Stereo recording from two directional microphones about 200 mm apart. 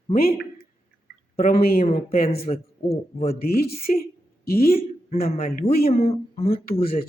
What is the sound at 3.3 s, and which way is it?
Speech, 50° left (ahead or behind).